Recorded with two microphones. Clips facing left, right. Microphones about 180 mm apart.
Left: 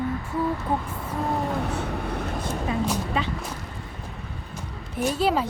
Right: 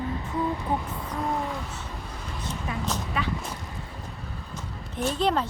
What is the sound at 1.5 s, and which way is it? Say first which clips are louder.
Vehicle: left 8 dB; 60° left (ahead or behind).